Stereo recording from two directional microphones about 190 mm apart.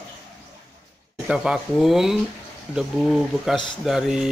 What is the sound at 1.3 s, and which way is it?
Speech, centre (ahead or behind).